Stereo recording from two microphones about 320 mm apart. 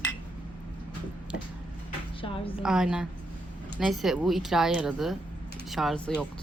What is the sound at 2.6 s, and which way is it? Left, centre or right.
Speech, centre.